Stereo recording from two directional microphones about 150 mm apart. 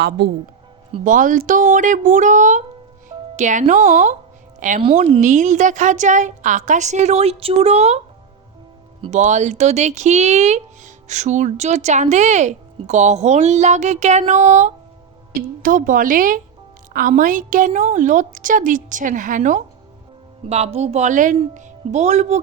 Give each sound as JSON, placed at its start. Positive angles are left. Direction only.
{"t": 1.0, "sound": "a woman's voice", "side_deg": -60}
{"t": 9.0, "sound": "speech", "side_deg": -50}
{"t": 15.4, "sound": "a woman's voice", "side_deg": -70}
{"t": 20.5, "sound": "speech", "side_deg": -45}